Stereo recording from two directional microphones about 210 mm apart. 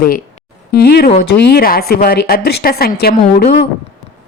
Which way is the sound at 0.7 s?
50° left (ahead or behind).